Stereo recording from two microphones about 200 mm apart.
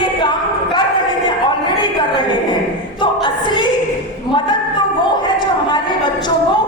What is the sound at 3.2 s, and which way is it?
Choir, 25° left (ahead or behind).